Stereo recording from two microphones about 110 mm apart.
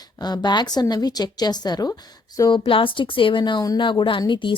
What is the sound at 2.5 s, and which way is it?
Speech, 50° left (ahead or behind).